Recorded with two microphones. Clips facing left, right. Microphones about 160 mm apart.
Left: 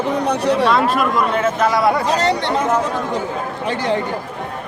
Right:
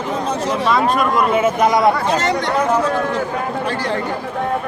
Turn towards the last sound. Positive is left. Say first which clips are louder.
# left 2 dB
turn(degrees=20)  # may be behind; listen again after turning